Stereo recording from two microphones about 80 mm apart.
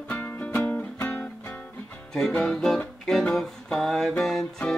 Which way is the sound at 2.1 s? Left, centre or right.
Centre.